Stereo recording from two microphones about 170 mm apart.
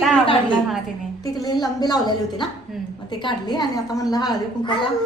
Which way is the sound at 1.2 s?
20° left (ahead or behind).